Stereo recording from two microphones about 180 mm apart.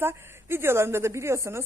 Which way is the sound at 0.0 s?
15° right (ahead or behind).